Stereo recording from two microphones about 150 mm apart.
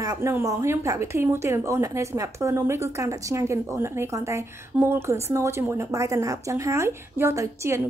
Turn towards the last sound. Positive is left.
turn(degrees=-20)  # may be behind; listen again after turning